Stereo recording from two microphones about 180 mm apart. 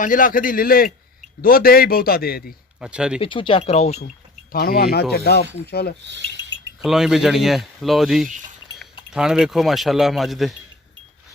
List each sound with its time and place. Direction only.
0.0 s a man's voice: 50° left (ahead or behind)
2.8 s speech: 5° right (ahead or behind)
3.2 s speech: 30° left (ahead or behind)
4.5 s a man's voice: 55° left (ahead or behind)
6.1 s speech: 75° right (ahead or behind)
6.8 s speech: centre (ahead or behind)